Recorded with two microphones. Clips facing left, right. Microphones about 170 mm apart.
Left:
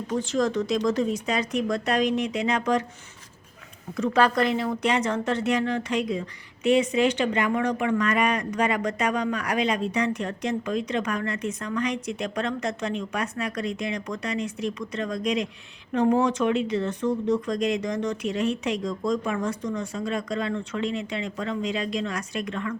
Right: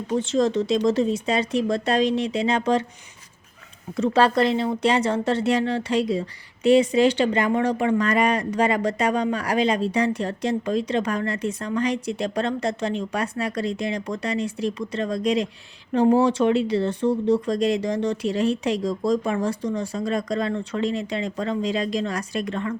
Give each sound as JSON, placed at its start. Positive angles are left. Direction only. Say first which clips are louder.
{"t": 0.1, "sound": "speech", "louder": "right 4 dB", "side_deg": -25}
{"t": 3.9, "sound": "speech", "louder": "right 3 dB", "side_deg": -30}